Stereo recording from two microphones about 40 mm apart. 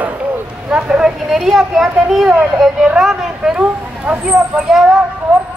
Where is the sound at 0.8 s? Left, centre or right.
Right.